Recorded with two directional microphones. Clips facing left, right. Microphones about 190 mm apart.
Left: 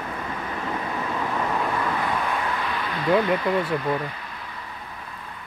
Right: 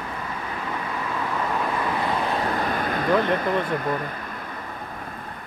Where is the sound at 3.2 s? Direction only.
50° right (ahead or behind).